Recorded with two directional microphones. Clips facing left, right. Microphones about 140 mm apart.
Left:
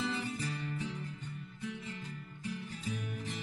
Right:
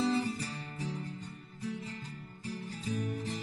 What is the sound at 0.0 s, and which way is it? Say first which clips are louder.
Music: right 5 dB; 35° right (ahead or behind).